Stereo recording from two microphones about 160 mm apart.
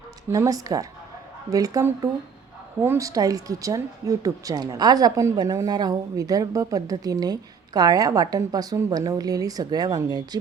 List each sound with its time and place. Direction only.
0.3 s speech: 20° right (ahead or behind)